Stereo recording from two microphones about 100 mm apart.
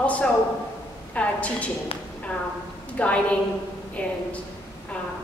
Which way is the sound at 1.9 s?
70° left (ahead or behind).